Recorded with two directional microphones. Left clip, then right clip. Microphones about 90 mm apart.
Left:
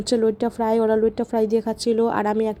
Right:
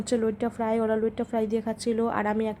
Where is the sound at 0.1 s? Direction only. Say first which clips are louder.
Left 6 dB; 35° left (ahead or behind).